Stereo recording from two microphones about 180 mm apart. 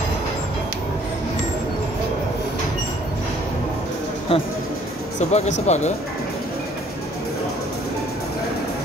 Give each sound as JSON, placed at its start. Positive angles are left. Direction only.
{"t": 4.3, "sound": "speech", "side_deg": 30}